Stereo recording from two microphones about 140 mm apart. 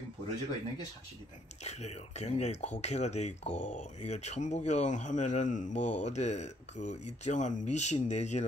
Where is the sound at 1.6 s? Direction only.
50° left (ahead or behind).